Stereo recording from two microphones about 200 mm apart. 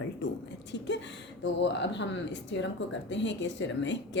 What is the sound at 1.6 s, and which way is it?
Speech, 60° left (ahead or behind).